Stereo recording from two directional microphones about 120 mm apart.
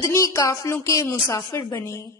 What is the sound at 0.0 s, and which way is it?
A woman's voice, 25° left (ahead or behind).